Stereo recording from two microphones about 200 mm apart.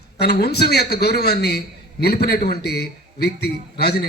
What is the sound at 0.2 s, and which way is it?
A man's voice, 55° left (ahead or behind).